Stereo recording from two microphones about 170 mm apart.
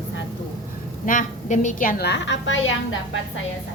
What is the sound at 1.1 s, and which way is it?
A woman's voice, 50° left (ahead or behind).